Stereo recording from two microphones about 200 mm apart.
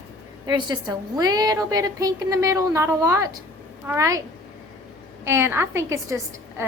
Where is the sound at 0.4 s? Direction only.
20° right (ahead or behind).